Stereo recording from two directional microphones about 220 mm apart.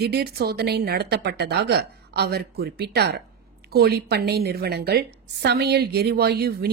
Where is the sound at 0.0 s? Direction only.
45° right (ahead or behind).